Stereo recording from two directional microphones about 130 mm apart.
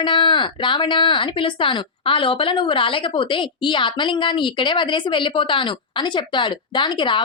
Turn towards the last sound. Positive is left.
turn(degrees=35)  # may be behind; listen again after turning